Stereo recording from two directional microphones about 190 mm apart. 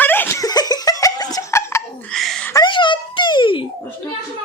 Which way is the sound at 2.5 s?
20° left (ahead or behind).